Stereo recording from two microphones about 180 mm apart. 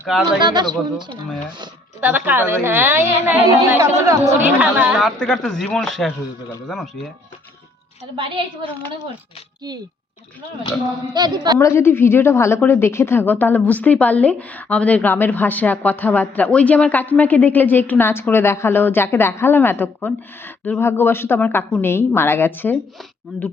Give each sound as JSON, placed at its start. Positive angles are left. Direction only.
{"t": 0.4, "sound": "speech", "side_deg": -25}
{"t": 2.0, "sound": "speech", "side_deg": -10}
{"t": 4.9, "sound": "a man's voice", "side_deg": 0}
{"t": 8.1, "sound": "speech", "side_deg": -30}
{"t": 11.1, "sound": "speech", "side_deg": -25}
{"t": 11.6, "sound": "a woman's voice", "side_deg": 15}